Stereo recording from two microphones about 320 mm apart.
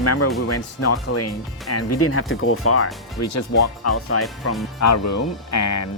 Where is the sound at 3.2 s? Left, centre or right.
Left.